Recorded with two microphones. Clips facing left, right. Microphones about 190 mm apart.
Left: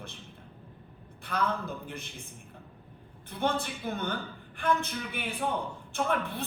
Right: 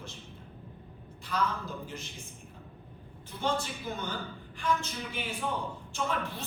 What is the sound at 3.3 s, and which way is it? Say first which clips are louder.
A man's voice: left 2 dB; 60° left (ahead or behind).